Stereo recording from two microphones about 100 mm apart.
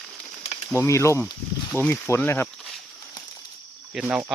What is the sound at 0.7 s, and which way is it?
Speech, 30° left (ahead or behind).